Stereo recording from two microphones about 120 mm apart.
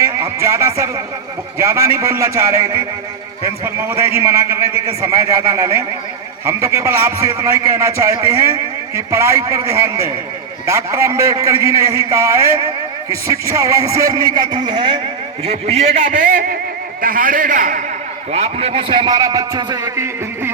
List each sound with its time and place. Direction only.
0.0 s a man's voice: 25° right (ahead or behind); by 15.0 s 40° right (ahead or behind)
15.4 s a man's voice: 60° right (ahead or behind); by 17.8 s 90° right
18.3 s a man's voice: 55° right (ahead or behind); by 20.5 s 25° right (ahead or behind)